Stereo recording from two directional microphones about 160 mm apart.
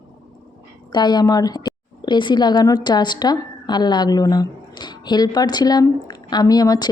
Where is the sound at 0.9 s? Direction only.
25° left (ahead or behind).